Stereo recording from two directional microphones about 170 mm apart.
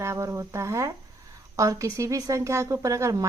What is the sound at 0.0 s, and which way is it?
A woman's voice, 15° right (ahead or behind).